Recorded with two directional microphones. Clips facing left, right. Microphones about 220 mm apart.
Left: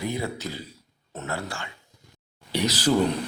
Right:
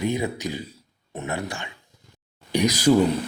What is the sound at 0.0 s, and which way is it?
Speech, 15° right (ahead or behind).